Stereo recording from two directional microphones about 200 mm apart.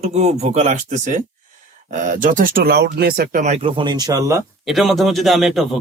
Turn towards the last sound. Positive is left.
turn(degrees=0)  # may be behind; listen again after turning